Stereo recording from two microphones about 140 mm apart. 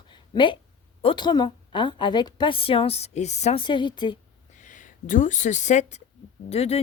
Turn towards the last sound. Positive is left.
turn(degrees=45)  # may be behind; listen again after turning